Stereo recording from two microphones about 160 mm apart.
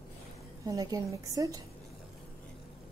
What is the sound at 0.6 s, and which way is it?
A woman's voice, 20° right (ahead or behind).